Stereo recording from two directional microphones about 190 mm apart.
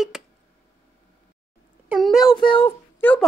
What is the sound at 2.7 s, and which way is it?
Speech, 10° left (ahead or behind).